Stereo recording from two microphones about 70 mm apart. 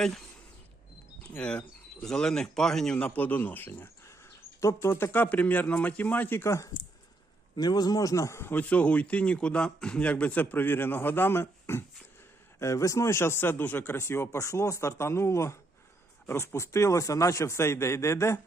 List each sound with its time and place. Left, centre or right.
1.4 s speech: centre
3.2 s a man's voice: left
7.5 s speech: left
8.4 s speech: left
8.6 s a man's voice: left
13.9 s speech: left